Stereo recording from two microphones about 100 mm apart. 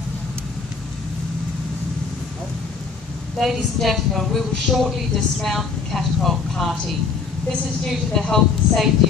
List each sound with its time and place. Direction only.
3.3 s a woman's voice: centre (ahead or behind)
8.1 s a woman's voice: 5° left (ahead or behind)